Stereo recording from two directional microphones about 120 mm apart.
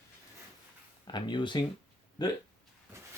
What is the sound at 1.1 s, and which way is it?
Speech, 40° left (ahead or behind).